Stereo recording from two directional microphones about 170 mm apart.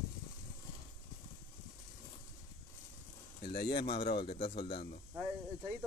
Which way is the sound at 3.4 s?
65° left (ahead or behind).